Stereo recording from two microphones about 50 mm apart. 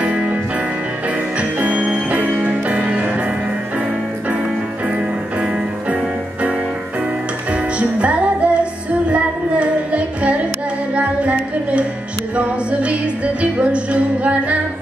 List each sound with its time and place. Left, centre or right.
0.0 s music: right
1.4 s music: right
7.5 s music: right
12.4 s music: right